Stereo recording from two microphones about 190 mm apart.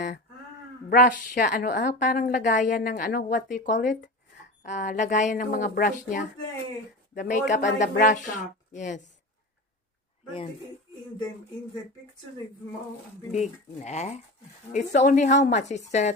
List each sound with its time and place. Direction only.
0.9 s a woman's voice: 45° left (ahead or behind)
13.3 s speech: 35° left (ahead or behind)